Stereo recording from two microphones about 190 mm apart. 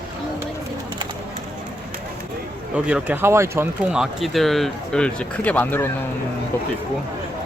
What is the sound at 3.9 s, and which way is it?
Speech, centre (ahead or behind).